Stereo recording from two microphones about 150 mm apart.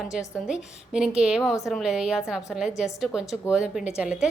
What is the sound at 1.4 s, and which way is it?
Speech, 20° left (ahead or behind).